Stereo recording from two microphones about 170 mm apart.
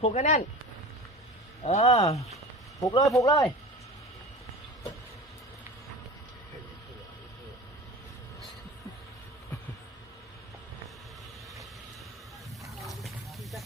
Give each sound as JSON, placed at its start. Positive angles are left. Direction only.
{"t": 0.0, "sound": "speech", "side_deg": 40}
{"t": 1.6, "sound": "speech", "side_deg": 40}
{"t": 2.8, "sound": "speech", "side_deg": 20}
{"t": 12.6, "sound": "a sound", "side_deg": 0}